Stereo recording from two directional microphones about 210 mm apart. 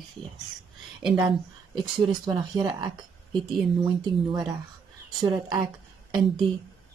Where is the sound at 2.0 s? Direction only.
20° right (ahead or behind).